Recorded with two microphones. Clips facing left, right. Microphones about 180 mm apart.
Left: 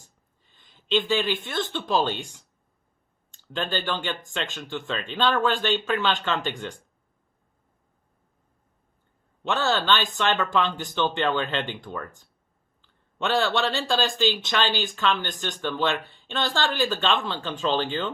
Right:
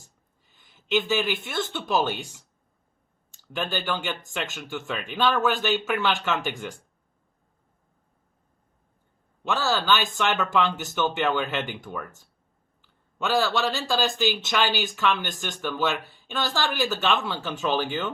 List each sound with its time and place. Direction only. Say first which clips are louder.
0.5 s speech: even; 10° right (ahead or behind)
3.3 s speech: left 1 dB; 10° right (ahead or behind)
9.4 s speech: left 1 dB; centre (ahead or behind)